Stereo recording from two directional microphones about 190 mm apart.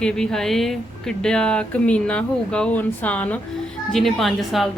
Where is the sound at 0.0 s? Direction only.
5° left (ahead or behind).